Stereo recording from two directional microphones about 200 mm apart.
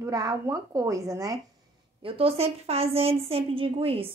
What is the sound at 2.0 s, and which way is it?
A woman's voice, 30° right (ahead or behind).